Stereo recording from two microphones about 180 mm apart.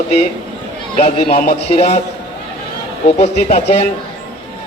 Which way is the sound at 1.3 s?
55° left (ahead or behind).